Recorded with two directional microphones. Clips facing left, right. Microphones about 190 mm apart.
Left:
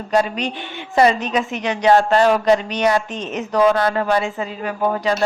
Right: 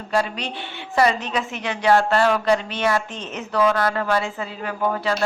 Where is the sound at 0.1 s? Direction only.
20° left (ahead or behind).